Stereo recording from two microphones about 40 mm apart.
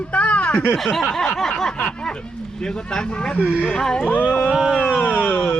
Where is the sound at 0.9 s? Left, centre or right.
Centre.